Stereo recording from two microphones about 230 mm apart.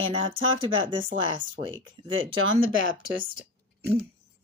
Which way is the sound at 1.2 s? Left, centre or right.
Right.